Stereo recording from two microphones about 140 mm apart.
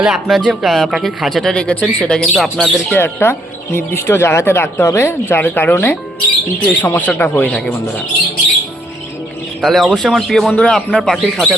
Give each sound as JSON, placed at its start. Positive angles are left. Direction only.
{"t": 0.0, "sound": "speech", "side_deg": -5}
{"t": 2.9, "sound": "speech", "side_deg": 15}
{"t": 9.6, "sound": "speech", "side_deg": 0}